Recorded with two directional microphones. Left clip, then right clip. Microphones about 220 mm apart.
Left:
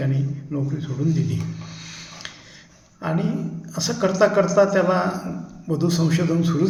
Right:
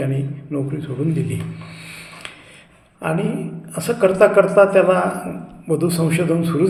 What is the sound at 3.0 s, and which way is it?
A man's voice, 5° left (ahead or behind).